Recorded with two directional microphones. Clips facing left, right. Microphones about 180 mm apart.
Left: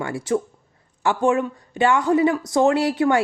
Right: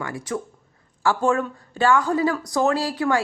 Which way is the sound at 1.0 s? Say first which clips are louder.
Left 2 dB; 20° left (ahead or behind).